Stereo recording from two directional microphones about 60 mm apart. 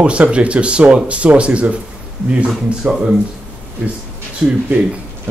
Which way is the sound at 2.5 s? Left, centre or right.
Centre.